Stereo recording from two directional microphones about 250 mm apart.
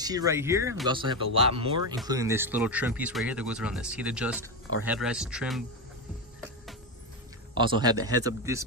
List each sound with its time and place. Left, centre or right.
0.0 s a man's voice: centre
7.5 s a man's voice: centre